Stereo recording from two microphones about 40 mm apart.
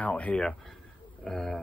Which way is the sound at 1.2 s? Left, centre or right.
Centre.